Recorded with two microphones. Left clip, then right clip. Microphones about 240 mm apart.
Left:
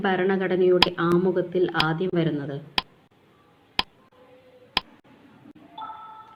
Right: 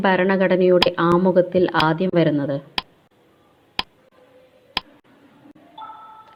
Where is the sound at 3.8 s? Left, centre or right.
Centre.